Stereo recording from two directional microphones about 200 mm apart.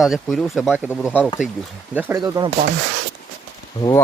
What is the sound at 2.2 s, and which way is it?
Speech, 20° right (ahead or behind).